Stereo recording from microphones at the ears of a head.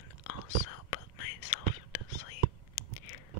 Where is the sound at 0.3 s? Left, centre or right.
Left.